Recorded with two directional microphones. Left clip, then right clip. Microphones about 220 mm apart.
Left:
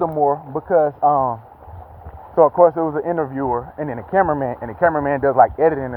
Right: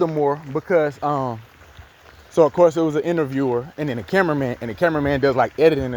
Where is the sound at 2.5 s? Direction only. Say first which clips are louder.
Left 2 dB; 80° right; by 5.5 s 60° right (ahead or behind).